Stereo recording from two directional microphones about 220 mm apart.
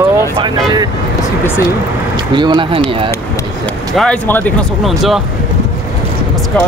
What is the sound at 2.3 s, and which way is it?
Speech, 20° right (ahead or behind).